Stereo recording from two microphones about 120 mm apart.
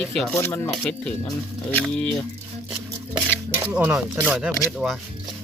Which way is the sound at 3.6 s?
15° right (ahead or behind).